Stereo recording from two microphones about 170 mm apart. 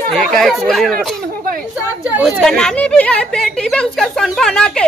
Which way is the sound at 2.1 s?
Centre (ahead or behind).